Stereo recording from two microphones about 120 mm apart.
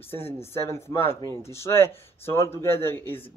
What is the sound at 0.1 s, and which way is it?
Speech, 20° left (ahead or behind).